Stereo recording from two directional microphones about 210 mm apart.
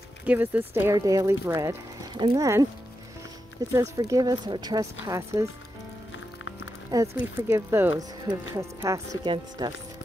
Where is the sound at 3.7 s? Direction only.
15° right (ahead or behind).